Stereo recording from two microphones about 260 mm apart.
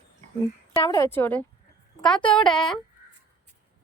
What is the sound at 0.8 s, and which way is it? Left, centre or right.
A woman's voice, centre.